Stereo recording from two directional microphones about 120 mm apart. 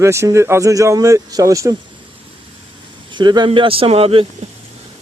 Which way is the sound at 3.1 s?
35° right (ahead or behind).